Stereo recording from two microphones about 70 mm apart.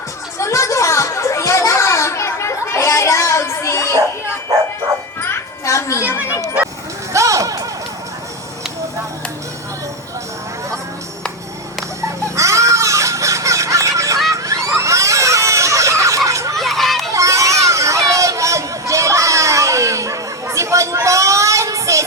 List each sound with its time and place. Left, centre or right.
0.3 s children playing: left
5.6 s children playing: left
7.1 s music: right
12.4 s a sound: right
16.6 s children playing: centre
17.1 s a sound: right